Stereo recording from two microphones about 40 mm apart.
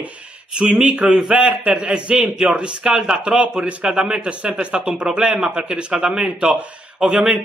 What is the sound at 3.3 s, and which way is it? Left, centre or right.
A man's voice, right.